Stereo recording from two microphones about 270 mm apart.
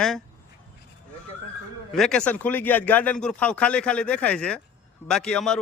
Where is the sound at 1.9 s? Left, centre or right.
Centre.